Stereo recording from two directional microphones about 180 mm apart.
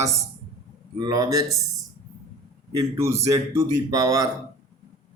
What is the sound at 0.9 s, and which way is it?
Speech, 20° right (ahead or behind).